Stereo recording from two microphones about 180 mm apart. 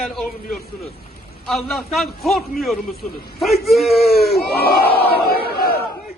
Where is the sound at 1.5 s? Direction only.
Centre (ahead or behind).